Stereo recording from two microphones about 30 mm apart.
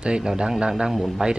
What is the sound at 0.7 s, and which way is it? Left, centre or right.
Speech, centre.